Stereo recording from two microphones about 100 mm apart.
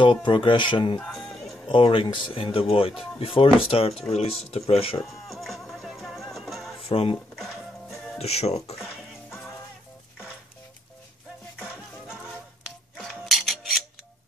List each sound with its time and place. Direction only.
0.0 s speech: 55° left (ahead or behind)
0.9 s music: 5° left (ahead or behind)
1.7 s speech: 60° left (ahead or behind)
4.1 s speech: 90° left; by 5.0 s 70° left (ahead or behind)
5.3 s music: centre (ahead or behind)
6.9 s speech: 75° left (ahead or behind)
7.3 s music: 5° left (ahead or behind)
8.2 s speech: 90° left
8.8 s music: centre (ahead or behind)
11.6 s music: 10° right (ahead or behind)
12.9 s mechanisms: centre (ahead or behind)